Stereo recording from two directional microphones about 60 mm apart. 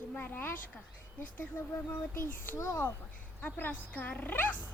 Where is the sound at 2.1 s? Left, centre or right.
Left.